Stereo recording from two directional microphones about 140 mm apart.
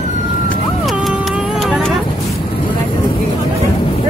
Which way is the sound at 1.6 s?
Centre (ahead or behind).